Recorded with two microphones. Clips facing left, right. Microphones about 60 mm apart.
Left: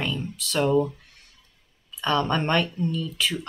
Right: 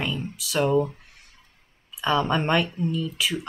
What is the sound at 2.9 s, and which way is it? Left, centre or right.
Speech, centre.